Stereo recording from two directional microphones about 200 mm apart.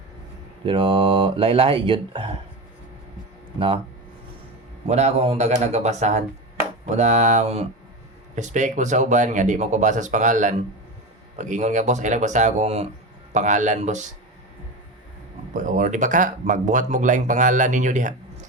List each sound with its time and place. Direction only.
0.6 s speech: 25° right (ahead or behind)
4.9 s speech: 35° right (ahead or behind)
15.5 s speech: 40° right (ahead or behind)